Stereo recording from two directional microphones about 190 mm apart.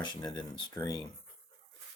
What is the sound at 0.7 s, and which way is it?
Speech, 15° left (ahead or behind).